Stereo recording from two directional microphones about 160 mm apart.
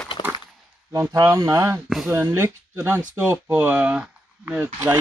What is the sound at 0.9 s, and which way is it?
Speech, 20° right (ahead or behind).